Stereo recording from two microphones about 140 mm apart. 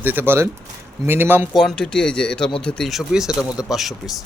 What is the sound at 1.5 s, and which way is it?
A man's voice, 5° left (ahead or behind).